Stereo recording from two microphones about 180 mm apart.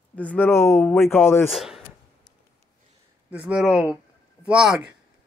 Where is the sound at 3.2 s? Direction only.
10° right (ahead or behind).